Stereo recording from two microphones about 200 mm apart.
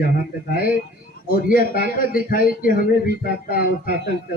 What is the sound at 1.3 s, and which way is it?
A man's voice, 45° left (ahead or behind).